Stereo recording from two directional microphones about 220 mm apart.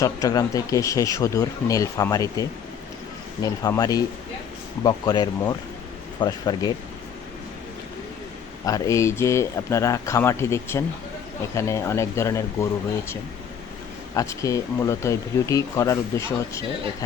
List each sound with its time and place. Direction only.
0.0 s speech: 15° left (ahead or behind)
8.6 s speech: 15° left (ahead or behind)
14.1 s speech: 15° left (ahead or behind)